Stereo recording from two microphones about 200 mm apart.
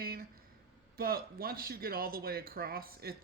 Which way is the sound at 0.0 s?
50° right (ahead or behind).